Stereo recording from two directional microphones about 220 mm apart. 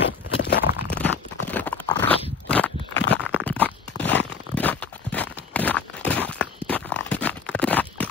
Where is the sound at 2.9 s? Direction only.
50° left (ahead or behind).